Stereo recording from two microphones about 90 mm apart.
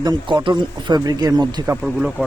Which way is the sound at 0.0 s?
50° right (ahead or behind).